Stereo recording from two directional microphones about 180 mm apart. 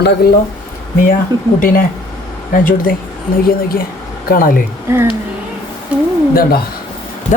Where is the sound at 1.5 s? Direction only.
50° left (ahead or behind).